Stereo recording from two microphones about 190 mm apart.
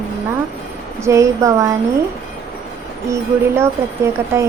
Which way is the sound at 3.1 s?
15° right (ahead or behind).